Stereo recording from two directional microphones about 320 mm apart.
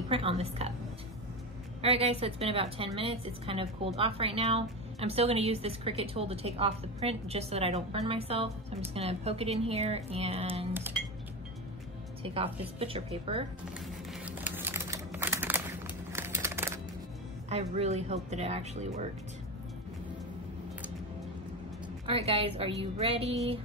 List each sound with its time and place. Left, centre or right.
0.1 s a woman's voice: centre
1.8 s a woman's voice: centre
12.7 s a woman's voice: centre
14.2 s a sound: centre
17.5 s speech: centre
22.0 s a woman's voice: centre